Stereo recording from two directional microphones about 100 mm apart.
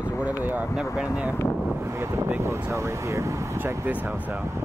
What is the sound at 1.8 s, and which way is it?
Speech, 25° right (ahead or behind).